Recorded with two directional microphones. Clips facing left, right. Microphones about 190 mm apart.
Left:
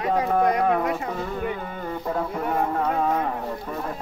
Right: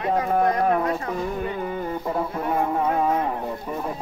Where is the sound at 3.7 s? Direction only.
10° right (ahead or behind).